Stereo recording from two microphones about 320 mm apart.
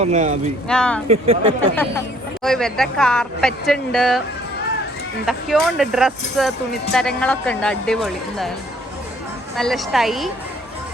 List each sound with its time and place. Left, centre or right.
0.0 s speech: right
0.7 s speech: centre
1.0 s speech: centre
2.4 s speech: centre
5.2 s speech: centre
9.6 s speech: centre